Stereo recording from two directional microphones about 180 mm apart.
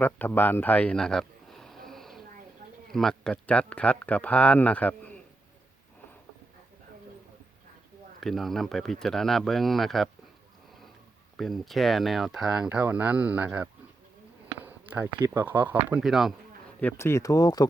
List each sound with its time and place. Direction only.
0.0 s a sound: 10° left (ahead or behind)
2.9 s speech: centre (ahead or behind)
8.2 s speech: centre (ahead or behind)
11.3 s speech: centre (ahead or behind)
14.6 s a sound: 10° right (ahead or behind)
15.3 s speech: 10° right (ahead or behind)
16.8 s speech: 15° left (ahead or behind)